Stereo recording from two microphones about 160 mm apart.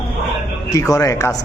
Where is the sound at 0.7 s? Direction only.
20° left (ahead or behind).